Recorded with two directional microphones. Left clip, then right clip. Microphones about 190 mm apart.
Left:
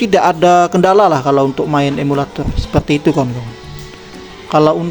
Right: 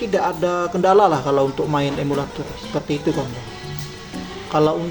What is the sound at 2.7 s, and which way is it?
Speech, 45° left (ahead or behind).